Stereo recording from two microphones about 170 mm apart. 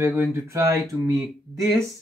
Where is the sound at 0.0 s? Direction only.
10° right (ahead or behind).